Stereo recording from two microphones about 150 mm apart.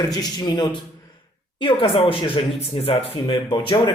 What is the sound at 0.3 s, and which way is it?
A man's voice, 25° left (ahead or behind).